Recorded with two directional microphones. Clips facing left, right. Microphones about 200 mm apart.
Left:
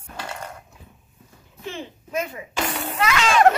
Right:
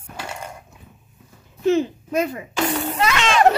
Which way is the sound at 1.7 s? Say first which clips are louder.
Right 14 dB; 40° right (ahead or behind).